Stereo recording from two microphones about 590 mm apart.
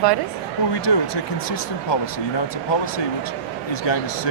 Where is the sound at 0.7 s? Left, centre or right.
Left.